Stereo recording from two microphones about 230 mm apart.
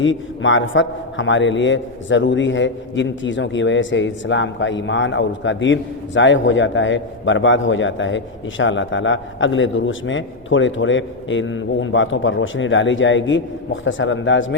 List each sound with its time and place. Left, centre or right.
0.0 s a man's voice: left